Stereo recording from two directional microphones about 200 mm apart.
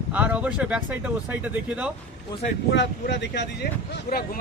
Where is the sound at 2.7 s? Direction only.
60° left (ahead or behind).